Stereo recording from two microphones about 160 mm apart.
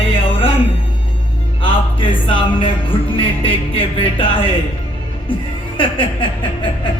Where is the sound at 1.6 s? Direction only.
35° left (ahead or behind).